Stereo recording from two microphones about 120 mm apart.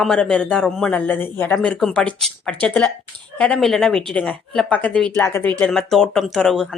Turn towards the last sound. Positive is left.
turn(degrees=5)  # may be behind; listen again after turning